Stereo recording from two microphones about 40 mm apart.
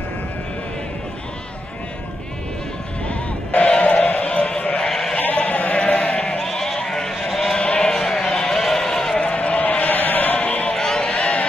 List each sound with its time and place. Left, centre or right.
3.1 s bleat: left
4.8 s sheep: centre
5.3 s sheep: left
5.9 s sheep: left
6.4 s bleat: centre
7.5 s sheep: left
7.9 s a sound: centre
8.3 s a sound: left
8.5 s bleat: centre
9.1 s a sound: left
10.4 s music: left
11.0 s a sound: left